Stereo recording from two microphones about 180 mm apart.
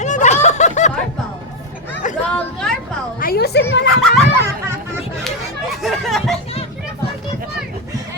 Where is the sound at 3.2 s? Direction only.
60° left (ahead or behind).